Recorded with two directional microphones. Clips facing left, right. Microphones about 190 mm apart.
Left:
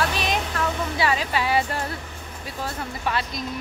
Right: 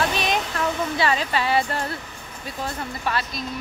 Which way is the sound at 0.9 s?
10° left (ahead or behind).